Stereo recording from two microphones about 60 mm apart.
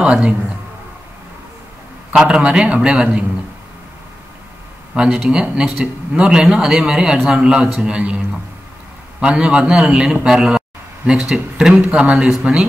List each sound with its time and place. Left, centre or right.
0.0 s a man's voice: centre
2.2 s a man's voice: centre
4.9 s a man's voice: centre
9.2 s a man's voice: centre